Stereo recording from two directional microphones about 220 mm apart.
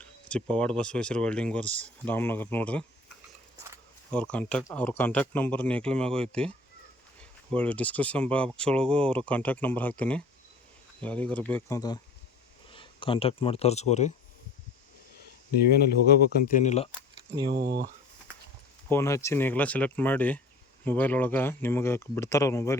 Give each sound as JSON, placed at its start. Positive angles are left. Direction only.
{"t": 0.0, "sound": "speech", "side_deg": 5}
{"t": 4.1, "sound": "speech", "side_deg": 5}
{"t": 12.7, "sound": "speech", "side_deg": 25}
{"t": 16.0, "sound": "speech", "side_deg": 40}
{"t": 17.5, "sound": "speech", "side_deg": -50}
{"t": 18.9, "sound": "speech", "side_deg": 10}